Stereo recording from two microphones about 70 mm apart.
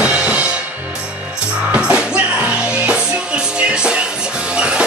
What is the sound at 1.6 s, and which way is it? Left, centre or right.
Music, centre.